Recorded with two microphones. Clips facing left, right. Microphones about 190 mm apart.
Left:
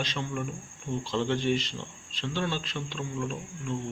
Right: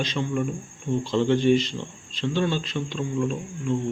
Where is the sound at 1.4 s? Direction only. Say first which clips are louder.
Right 8 dB; 5° left (ahead or behind).